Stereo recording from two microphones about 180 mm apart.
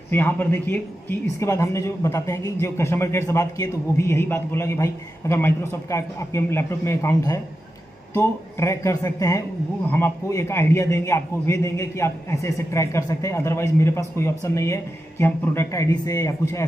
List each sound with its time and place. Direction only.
0.1 s a man's voice: 10° left (ahead or behind)